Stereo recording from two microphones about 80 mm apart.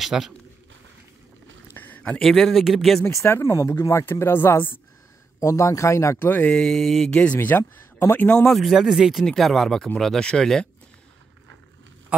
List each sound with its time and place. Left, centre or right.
0.0 s speech: centre
1.7 s a sound: left
2.2 s speech: centre
3.3 s speech: left
5.4 s speech: left
6.2 s speech: left
6.5 s speech: centre
7.1 s speech: centre
8.5 s speech: centre
9.2 s speech: centre